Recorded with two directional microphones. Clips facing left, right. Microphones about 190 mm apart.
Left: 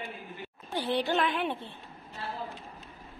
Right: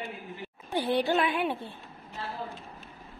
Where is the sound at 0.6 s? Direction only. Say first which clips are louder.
Right 3 dB; 15° right (ahead or behind).